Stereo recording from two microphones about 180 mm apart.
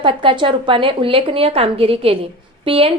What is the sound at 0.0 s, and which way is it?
A woman's voice, 25° right (ahead or behind).